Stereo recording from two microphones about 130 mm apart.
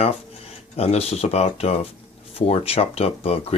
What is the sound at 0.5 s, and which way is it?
Speech, 50° left (ahead or behind).